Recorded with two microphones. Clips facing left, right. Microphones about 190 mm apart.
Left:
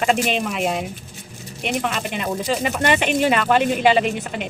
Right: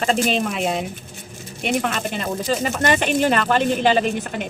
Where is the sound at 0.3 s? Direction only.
Centre (ahead or behind).